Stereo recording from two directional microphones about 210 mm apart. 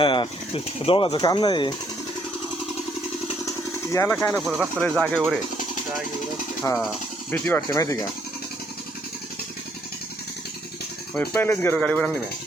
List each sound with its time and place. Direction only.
0.0 s speech: 25° left (ahead or behind)
3.9 s speech: 10° left (ahead or behind)
6.6 s speech: 5° left (ahead or behind)
11.1 s speech: 10° left (ahead or behind)